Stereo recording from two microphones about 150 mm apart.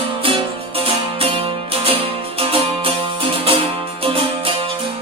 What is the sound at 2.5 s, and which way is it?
Music, 40° right (ahead or behind).